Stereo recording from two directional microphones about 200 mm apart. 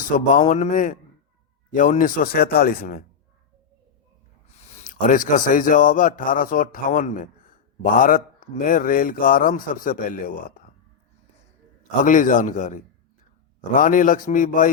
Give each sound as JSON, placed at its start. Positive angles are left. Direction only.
{"t": 0.1, "sound": "a man's voice", "side_deg": 35}
{"t": 4.8, "sound": "speech", "side_deg": 40}
{"t": 12.0, "sound": "a man's voice", "side_deg": 40}